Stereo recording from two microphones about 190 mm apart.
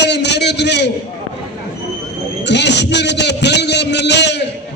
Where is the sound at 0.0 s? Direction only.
65° left (ahead or behind).